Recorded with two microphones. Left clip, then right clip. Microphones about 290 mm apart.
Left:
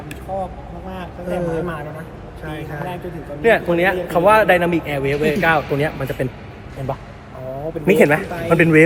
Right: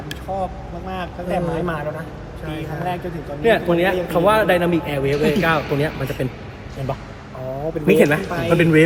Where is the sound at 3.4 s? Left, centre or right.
Centre.